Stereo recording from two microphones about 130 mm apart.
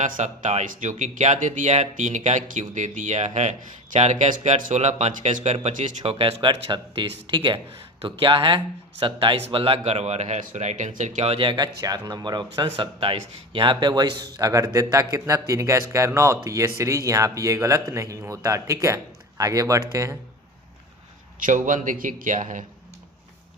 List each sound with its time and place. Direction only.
0.0 s speech: 65° right (ahead or behind)
6.1 s speech: 45° right (ahead or behind); by 20.1 s 25° right (ahead or behind)
21.3 s a man's voice: 85° right